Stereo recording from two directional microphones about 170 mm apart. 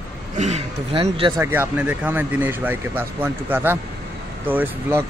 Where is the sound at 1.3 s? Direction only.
10° right (ahead or behind).